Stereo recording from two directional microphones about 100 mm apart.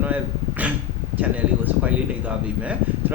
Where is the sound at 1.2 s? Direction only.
15° right (ahead or behind).